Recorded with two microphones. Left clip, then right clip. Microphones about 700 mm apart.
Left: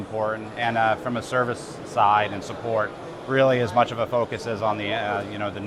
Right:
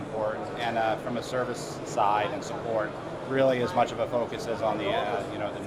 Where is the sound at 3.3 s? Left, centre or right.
Left.